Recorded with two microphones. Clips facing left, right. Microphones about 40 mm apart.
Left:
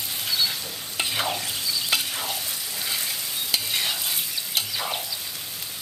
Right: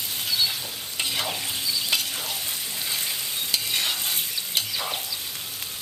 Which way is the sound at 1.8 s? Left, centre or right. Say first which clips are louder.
Left 1 dB; centre.